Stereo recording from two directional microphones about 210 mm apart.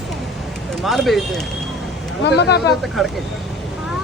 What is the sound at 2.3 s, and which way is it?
Speech, 55° left (ahead or behind).